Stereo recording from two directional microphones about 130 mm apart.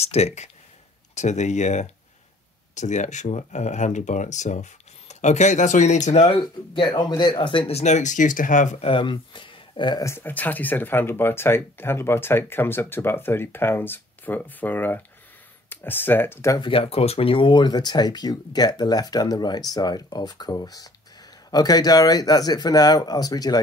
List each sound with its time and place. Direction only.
0.0 s speech: 55° left (ahead or behind)
6.4 s speech: 40° left (ahead or behind); by 8.7 s 85° left
8.7 s speech: 45° left (ahead or behind)
10.0 s speech: 15° left (ahead or behind)
16.6 s speech: 45° left (ahead or behind)